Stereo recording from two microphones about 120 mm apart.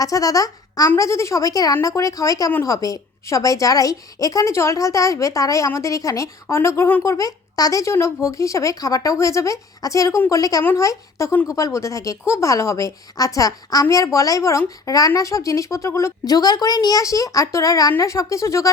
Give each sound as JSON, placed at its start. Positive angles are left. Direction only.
{"t": 0.0, "sound": "a child's voice", "side_deg": 30}